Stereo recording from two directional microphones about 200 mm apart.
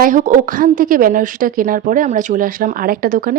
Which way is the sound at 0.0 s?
40° right (ahead or behind).